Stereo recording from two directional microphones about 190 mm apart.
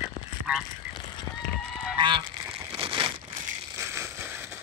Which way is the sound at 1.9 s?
25° right (ahead or behind).